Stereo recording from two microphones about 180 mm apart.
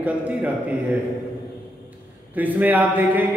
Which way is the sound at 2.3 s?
10° right (ahead or behind).